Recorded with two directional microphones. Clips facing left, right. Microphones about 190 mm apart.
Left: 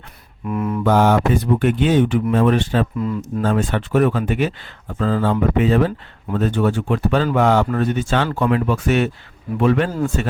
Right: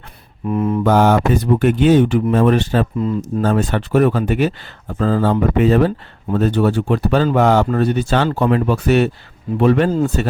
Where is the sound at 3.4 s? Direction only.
40° right (ahead or behind).